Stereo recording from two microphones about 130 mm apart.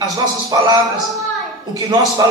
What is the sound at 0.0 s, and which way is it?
Music, 30° right (ahead or behind).